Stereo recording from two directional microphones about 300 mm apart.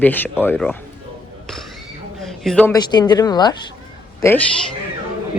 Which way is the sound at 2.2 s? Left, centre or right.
Centre.